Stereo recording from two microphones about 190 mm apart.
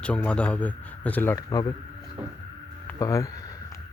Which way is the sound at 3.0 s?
15° left (ahead or behind).